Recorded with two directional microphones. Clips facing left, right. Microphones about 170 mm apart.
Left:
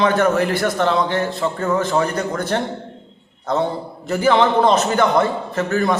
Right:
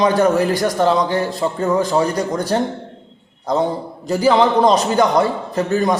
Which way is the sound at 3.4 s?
15° right (ahead or behind).